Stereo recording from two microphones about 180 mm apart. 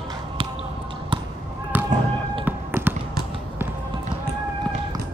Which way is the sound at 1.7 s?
10° right (ahead or behind).